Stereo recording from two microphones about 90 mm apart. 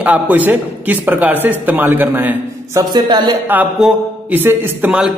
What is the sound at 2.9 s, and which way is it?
Speech, 55° right (ahead or behind).